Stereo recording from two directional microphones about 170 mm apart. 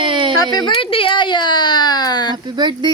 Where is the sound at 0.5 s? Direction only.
30° left (ahead or behind).